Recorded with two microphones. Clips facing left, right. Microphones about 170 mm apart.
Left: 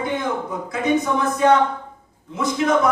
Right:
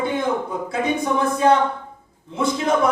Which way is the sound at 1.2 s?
30° right (ahead or behind).